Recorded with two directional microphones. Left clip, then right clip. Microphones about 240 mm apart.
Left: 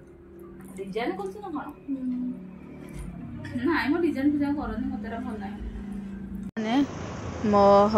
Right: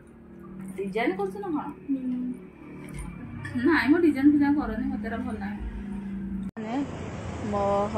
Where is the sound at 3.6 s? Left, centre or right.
Centre.